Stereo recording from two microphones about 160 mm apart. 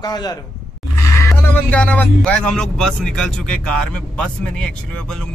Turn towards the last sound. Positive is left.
turn(degrees=5)  # may be behind; listen again after turning